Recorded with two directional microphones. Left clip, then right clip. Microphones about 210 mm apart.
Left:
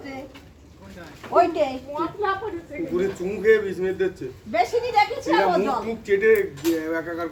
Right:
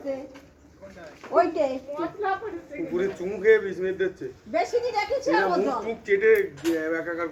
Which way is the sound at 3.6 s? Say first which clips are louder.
Left 2 dB; 30° left (ahead or behind).